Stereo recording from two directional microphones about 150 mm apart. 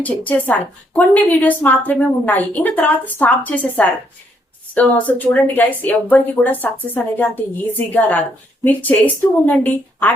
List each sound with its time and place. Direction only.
0.0 s speech: 10° left (ahead or behind)